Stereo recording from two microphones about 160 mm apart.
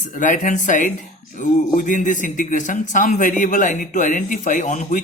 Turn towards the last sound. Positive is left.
turn(degrees=45)  # may be behind; listen again after turning